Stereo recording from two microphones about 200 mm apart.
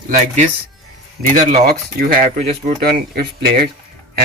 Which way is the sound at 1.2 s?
40° right (ahead or behind).